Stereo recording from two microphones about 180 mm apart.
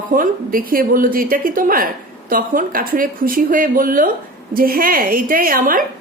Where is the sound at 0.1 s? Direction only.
50° right (ahead or behind).